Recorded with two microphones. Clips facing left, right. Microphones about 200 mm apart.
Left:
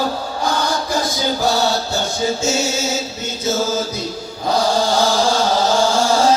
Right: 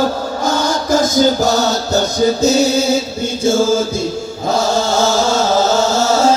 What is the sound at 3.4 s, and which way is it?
Mantra, 30° right (ahead or behind).